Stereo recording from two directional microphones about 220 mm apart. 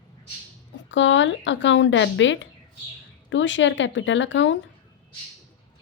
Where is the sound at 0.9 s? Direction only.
55° left (ahead or behind).